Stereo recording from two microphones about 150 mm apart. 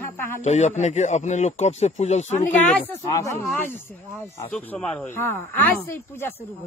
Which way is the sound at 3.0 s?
20° left (ahead or behind).